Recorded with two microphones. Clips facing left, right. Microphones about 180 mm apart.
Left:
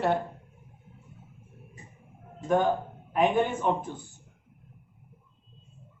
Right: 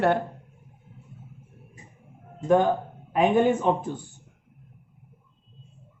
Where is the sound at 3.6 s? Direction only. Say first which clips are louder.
Right 3 dB; 90° right.